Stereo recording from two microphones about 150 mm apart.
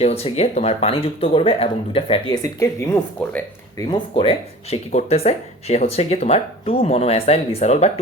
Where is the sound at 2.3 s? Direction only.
25° left (ahead or behind).